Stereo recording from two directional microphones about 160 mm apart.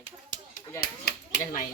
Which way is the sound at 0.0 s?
55° left (ahead or behind).